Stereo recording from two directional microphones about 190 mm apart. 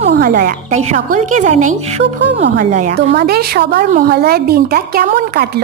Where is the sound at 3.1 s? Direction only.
55° right (ahead or behind).